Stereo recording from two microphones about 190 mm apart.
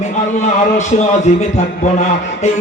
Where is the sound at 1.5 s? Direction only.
35° left (ahead or behind).